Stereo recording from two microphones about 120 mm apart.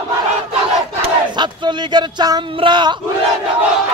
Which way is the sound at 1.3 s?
40° right (ahead or behind).